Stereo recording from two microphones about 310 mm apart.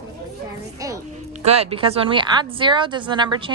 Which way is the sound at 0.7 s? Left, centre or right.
Centre.